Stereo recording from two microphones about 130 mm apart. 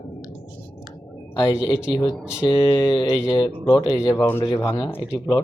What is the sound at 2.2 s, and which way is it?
Mantra, 5° right (ahead or behind).